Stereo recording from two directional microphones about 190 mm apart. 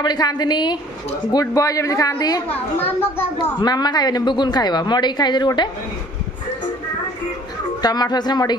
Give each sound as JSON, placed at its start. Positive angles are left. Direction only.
{"t": 0.0, "sound": "a woman's voice", "side_deg": 20}
{"t": 3.6, "sound": "a woman's voice", "side_deg": 20}
{"t": 7.8, "sound": "a woman's voice", "side_deg": 20}